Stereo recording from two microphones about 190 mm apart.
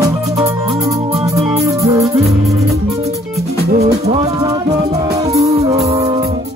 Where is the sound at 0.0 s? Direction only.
15° right (ahead or behind).